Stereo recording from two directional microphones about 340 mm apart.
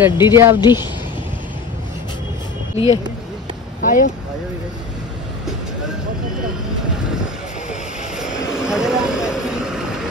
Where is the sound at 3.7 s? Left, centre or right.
Left.